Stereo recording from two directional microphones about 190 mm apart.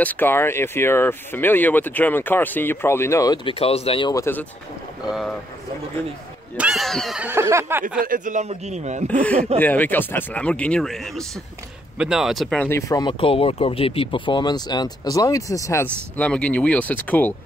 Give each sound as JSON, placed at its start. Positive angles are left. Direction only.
{"t": 0.0, "sound": "speech", "side_deg": 10}
{"t": 3.4, "sound": "speech", "side_deg": 30}
{"t": 4.1, "sound": "speech", "side_deg": 15}
{"t": 5.0, "sound": "speech", "side_deg": 0}
{"t": 6.5, "sound": "speech", "side_deg": -5}
{"t": 8.0, "sound": "speech", "side_deg": -45}
{"t": 9.0, "sound": "speech", "side_deg": 5}